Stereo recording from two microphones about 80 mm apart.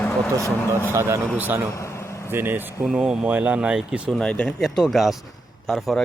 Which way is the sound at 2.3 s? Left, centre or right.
Right.